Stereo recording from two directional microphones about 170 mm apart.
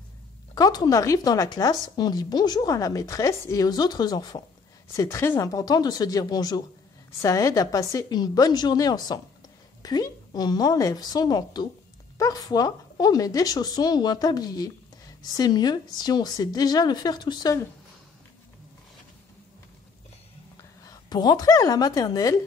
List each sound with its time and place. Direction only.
0.6 s speech: 25° left (ahead or behind)
20.8 s speech: 25° left (ahead or behind)